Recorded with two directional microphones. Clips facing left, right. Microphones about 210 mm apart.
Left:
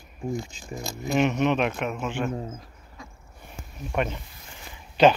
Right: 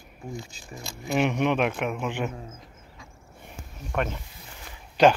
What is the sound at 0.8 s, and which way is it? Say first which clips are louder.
Speech: left 2 dB; 40° left (ahead or behind).